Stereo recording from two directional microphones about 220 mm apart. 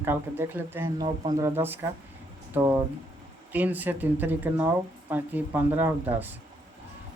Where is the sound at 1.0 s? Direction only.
20° right (ahead or behind).